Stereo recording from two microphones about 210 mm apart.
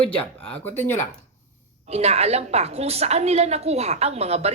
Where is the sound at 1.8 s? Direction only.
30° right (ahead or behind).